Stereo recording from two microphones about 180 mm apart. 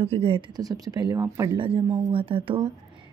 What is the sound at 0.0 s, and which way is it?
Speech, 35° right (ahead or behind).